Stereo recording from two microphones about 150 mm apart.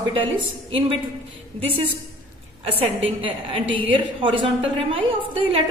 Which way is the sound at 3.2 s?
35° right (ahead or behind).